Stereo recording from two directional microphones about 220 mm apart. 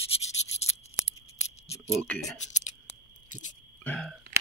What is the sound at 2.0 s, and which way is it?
Speech, 5° left (ahead or behind).